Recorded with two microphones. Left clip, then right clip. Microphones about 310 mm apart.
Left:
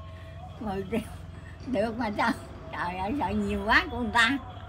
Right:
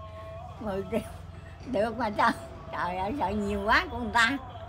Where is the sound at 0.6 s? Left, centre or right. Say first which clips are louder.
Right 1 dB; centre.